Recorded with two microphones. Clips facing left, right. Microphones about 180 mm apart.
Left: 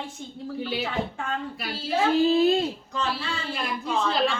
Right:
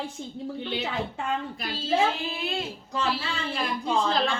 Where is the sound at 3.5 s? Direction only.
Centre (ahead or behind).